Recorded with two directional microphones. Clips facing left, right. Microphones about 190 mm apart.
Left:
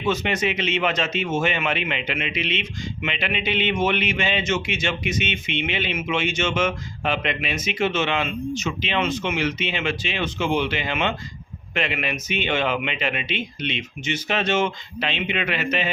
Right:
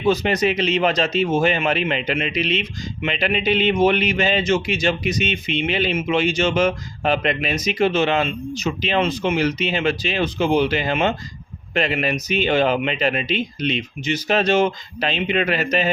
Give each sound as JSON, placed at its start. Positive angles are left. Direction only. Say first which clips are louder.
{"t": 0.0, "sound": "speech", "louder": "right 5 dB", "side_deg": -35}